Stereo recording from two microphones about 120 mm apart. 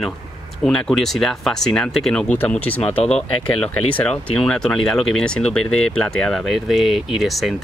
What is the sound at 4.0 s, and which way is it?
Speech, 5° left (ahead or behind).